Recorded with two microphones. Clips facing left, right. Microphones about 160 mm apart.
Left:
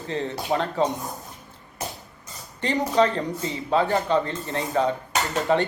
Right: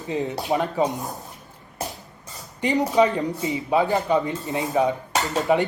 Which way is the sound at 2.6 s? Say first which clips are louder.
Right 2 dB; 15° right (ahead or behind).